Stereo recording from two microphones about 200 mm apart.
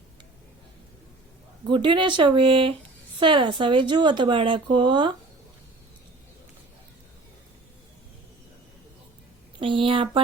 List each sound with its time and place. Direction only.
1.6 s speech: 25° right (ahead or behind)
9.6 s speech: 25° right (ahead or behind)